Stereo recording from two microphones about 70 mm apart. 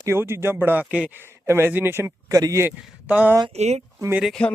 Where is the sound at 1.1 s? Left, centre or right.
Right.